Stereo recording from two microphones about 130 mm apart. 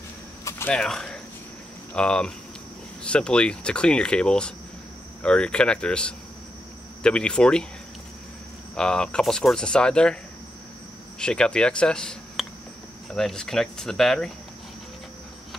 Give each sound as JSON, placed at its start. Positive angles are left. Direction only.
{"t": 0.5, "sound": "a sound", "side_deg": 20}
{"t": 0.7, "sound": "speech", "side_deg": 5}
{"t": 8.7, "sound": "speech", "side_deg": 5}
{"t": 11.1, "sound": "speech", "side_deg": 5}